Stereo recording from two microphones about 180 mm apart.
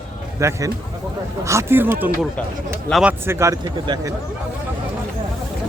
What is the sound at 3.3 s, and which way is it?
Speech, 15° right (ahead or behind).